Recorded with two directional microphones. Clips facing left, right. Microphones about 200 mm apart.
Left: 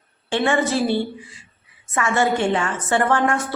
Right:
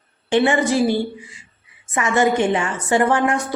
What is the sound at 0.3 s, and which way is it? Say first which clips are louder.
A woman's voice: right 3 dB; 15° right (ahead or behind).